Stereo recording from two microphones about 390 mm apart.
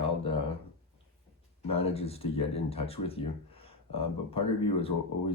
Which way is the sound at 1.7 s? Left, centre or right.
Centre.